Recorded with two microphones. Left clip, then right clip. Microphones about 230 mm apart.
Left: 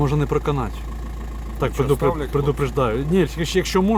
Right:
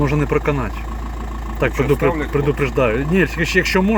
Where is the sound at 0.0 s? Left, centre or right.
Centre.